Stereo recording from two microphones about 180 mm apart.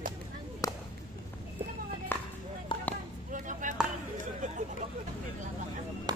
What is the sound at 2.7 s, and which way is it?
Basketball bounce, 30° left (ahead or behind).